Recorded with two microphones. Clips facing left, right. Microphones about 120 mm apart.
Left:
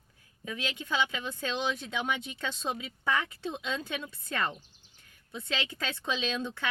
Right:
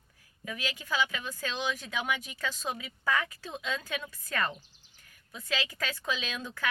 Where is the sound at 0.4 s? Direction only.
25° left (ahead or behind).